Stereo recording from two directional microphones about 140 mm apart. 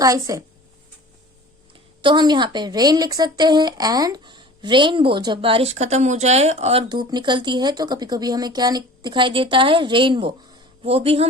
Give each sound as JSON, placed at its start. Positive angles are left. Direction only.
{"t": 0.0, "sound": "a woman's voice", "side_deg": -25}
{"t": 2.0, "sound": "a woman's voice", "side_deg": -35}
{"t": 5.7, "sound": "speech", "side_deg": -55}
{"t": 7.1, "sound": "a woman's voice", "side_deg": -35}